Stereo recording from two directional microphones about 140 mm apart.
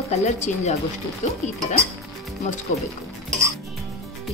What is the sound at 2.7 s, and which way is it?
Speech, 60° left (ahead or behind).